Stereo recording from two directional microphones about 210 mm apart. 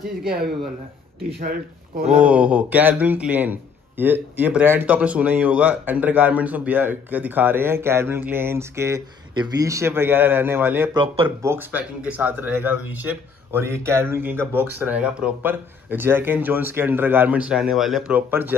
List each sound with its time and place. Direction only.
1.4 s speech: 50° right (ahead or behind)
2.0 s a man's voice: 5° right (ahead or behind)